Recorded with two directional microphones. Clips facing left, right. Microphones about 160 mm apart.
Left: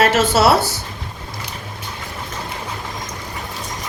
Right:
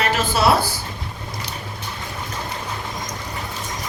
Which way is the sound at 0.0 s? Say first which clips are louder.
Left 6 dB; 90° left.